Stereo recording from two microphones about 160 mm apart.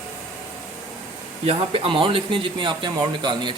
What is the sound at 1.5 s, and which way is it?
Speech, 35° right (ahead or behind).